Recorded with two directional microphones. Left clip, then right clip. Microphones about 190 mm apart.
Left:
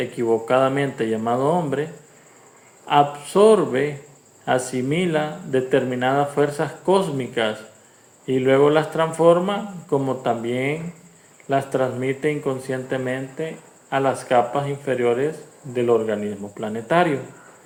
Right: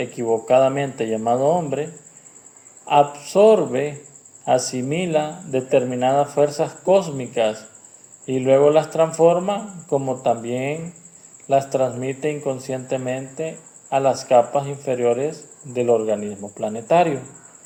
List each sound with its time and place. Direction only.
0.0 s speech: 35° right (ahead or behind)